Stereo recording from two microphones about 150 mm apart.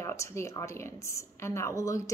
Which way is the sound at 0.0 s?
20° left (ahead or behind).